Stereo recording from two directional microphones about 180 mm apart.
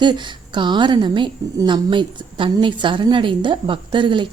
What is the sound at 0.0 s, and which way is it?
A woman's voice, 25° right (ahead or behind).